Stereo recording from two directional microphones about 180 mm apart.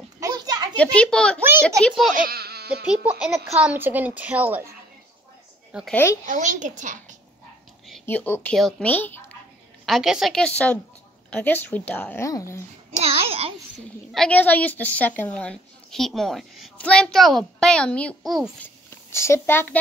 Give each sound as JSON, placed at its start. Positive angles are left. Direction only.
{"t": 0.2, "sound": "children playing", "side_deg": -20}
{"t": 0.7, "sound": "a woman's voice", "side_deg": 5}
{"t": 1.4, "sound": "a child's voice", "side_deg": -15}
{"t": 2.2, "sound": "a sound", "side_deg": -60}
{"t": 2.9, "sound": "a child's voice", "side_deg": -5}
{"t": 5.9, "sound": "a child's voice", "side_deg": 10}
{"t": 6.2, "sound": "a child's voice", "side_deg": -45}
{"t": 8.0, "sound": "a child's voice", "side_deg": 10}
{"t": 13.0, "sound": "a child's voice", "side_deg": -35}
{"t": 13.7, "sound": "a woman's voice", "side_deg": 5}
{"t": 18.9, "sound": "a child's voice", "side_deg": 15}